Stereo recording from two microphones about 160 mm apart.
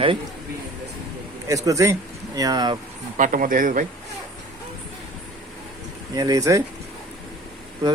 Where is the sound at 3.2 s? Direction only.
55° right (ahead or behind).